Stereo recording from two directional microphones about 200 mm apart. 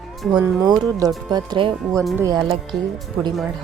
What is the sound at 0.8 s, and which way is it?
Speech, 20° right (ahead or behind).